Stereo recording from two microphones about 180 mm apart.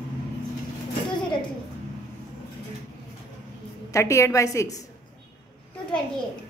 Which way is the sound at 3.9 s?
15° left (ahead or behind).